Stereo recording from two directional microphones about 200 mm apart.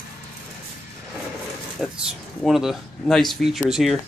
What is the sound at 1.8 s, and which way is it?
Speech, centre (ahead or behind).